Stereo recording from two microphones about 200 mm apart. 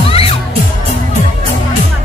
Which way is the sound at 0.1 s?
30° left (ahead or behind).